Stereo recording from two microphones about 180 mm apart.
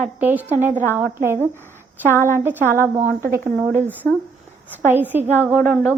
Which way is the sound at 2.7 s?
15° right (ahead or behind).